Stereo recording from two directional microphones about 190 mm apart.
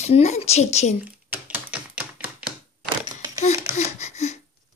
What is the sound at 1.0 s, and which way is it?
Typewriter, 10° right (ahead or behind).